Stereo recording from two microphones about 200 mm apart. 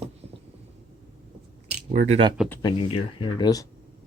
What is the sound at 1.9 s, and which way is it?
Speech, 40° right (ahead or behind).